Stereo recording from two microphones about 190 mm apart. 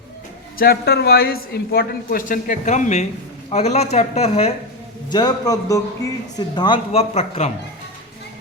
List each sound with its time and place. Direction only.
0.6 s a man's voice: 55° left (ahead or behind); by 4.5 s 35° left (ahead or behind)
5.1 s a man's voice: 20° left (ahead or behind); by 7.5 s 35° left (ahead or behind)